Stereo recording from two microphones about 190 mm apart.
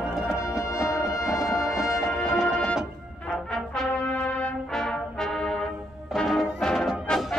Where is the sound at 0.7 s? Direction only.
15° left (ahead or behind).